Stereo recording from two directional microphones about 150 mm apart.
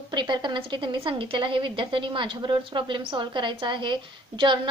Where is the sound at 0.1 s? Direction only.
30° right (ahead or behind).